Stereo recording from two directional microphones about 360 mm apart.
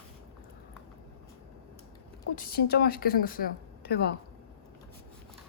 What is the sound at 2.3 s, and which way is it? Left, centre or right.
A woman's voice, left.